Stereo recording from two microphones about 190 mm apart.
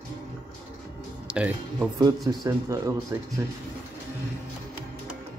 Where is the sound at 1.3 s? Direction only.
5° right (ahead or behind).